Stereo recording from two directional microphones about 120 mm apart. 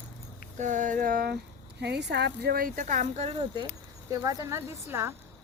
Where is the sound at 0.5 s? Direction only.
90° right.